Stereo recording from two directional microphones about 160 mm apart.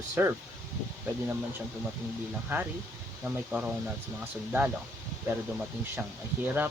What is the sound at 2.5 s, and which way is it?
Speech, 15° right (ahead or behind).